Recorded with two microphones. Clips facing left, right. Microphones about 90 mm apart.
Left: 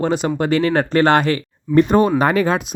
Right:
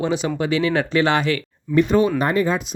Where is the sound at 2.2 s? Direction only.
90° left.